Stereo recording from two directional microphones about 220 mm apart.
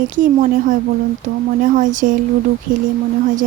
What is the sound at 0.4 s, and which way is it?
Speech, 35° right (ahead or behind).